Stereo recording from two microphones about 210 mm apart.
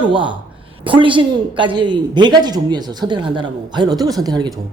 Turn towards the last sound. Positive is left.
turn(degrees=-20)  # may be behind; listen again after turning